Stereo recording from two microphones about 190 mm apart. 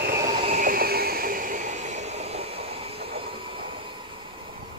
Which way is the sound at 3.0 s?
30° right (ahead or behind).